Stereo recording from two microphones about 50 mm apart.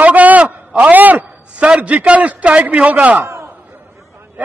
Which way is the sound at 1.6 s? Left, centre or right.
Right.